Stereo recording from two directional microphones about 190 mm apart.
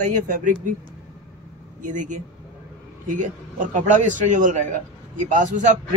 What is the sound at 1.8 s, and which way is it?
A man's voice, 40° right (ahead or behind).